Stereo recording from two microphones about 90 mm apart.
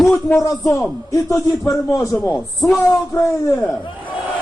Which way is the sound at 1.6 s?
35° left (ahead or behind).